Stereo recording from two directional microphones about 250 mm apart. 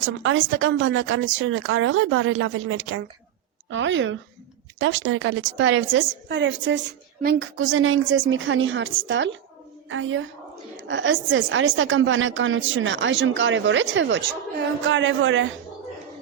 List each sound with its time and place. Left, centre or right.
0.0 s a woman's voice: right